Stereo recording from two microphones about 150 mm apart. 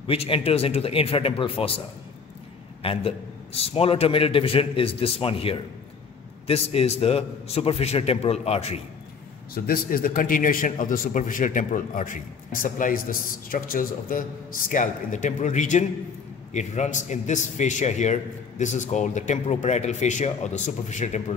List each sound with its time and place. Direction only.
0.0 s a man's voice: 40° left (ahead or behind)
2.8 s a man's voice: 40° left (ahead or behind)
9.7 s a man's voice: 75° left (ahead or behind)
14.7 s a man's voice: 60° left (ahead or behind)